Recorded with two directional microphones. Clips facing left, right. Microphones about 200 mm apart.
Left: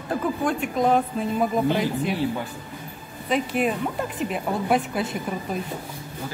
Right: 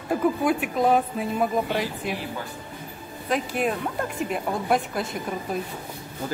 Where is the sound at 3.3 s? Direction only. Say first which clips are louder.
Left 2 dB; centre (ahead or behind).